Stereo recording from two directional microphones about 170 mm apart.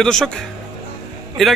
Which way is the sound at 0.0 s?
Centre (ahead or behind).